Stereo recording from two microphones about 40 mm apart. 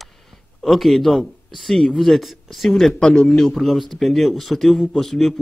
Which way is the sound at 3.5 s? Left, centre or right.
Centre.